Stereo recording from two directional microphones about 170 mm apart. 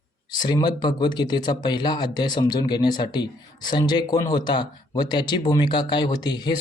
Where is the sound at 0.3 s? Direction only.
25° left (ahead or behind).